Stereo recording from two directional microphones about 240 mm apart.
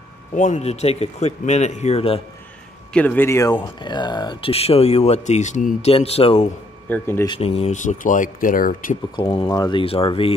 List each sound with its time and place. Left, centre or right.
0.3 s speech: left
2.9 s speech: centre; by 6.5 s left
6.9 s speech: centre
7.2 s speech: left
9.1 s speech: left